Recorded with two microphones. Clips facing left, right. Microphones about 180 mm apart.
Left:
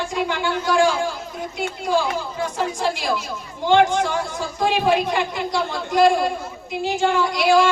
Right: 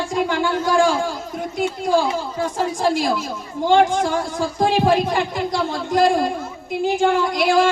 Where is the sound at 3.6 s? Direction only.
45° right (ahead or behind).